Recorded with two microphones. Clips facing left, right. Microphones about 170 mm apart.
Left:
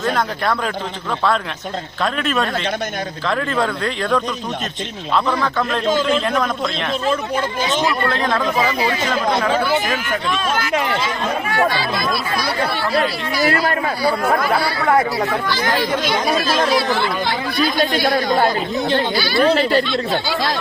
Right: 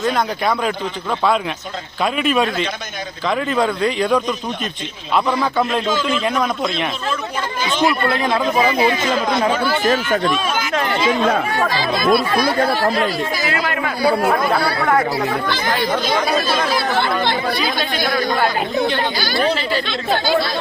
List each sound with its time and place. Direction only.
0.0 s speech: centre (ahead or behind)
2.1 s speech: 10° right (ahead or behind)
6.2 s speech: 5° right (ahead or behind)
7.9 s speech: 10° right (ahead or behind)
10.7 s speech: 10° left (ahead or behind)
12.1 s speech: 50° right (ahead or behind)
13.4 s speech: 40° left (ahead or behind)
16.9 s speech: 60° right (ahead or behind)
19.1 s speech: 45° right (ahead or behind)
19.5 s speech: 55° left (ahead or behind)